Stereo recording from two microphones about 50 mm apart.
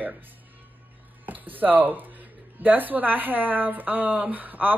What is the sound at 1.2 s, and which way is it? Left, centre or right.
A woman's voice, right.